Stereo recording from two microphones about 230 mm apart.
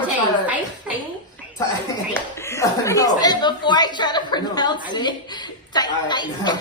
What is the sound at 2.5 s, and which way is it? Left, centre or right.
Speech, centre.